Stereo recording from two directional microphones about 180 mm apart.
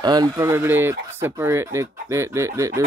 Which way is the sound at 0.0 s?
20° right (ahead or behind).